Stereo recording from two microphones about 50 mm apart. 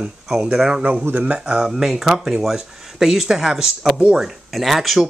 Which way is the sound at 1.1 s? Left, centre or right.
Right.